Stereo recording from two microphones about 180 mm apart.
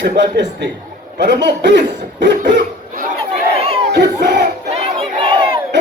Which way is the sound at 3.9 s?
75° right (ahead or behind).